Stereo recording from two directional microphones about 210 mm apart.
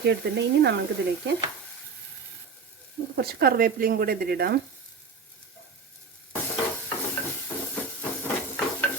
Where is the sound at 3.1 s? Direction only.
50° right (ahead or behind).